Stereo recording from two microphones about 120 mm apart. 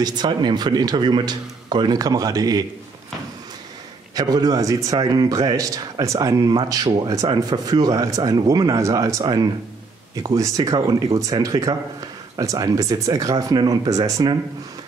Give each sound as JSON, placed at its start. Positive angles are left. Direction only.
{"t": 0.0, "sound": "speech", "side_deg": -35}
{"t": 4.1, "sound": "speech", "side_deg": -30}